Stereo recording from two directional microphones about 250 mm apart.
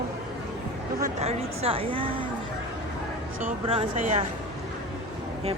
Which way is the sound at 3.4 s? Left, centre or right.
Right.